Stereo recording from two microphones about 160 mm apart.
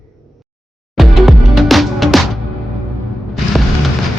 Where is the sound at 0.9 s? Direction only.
Centre (ahead or behind).